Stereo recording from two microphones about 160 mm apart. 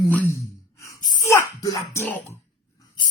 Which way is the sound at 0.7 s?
20° left (ahead or behind).